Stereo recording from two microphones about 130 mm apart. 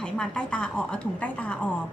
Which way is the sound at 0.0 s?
10° left (ahead or behind).